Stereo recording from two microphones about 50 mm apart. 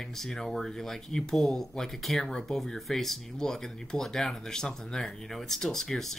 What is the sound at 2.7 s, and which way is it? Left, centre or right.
Speech, centre.